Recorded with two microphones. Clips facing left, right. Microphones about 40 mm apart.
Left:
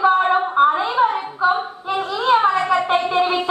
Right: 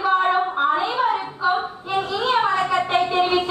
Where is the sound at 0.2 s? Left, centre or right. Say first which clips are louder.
Left 4 dB; centre.